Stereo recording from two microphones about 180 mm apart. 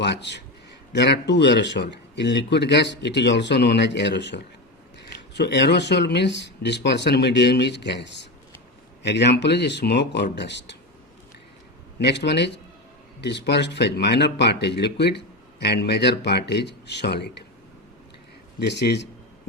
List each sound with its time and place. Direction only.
0.0 s a man's voice: 70° left (ahead or behind)
11.9 s speech: 75° left (ahead or behind)
18.6 s speech: 70° left (ahead or behind)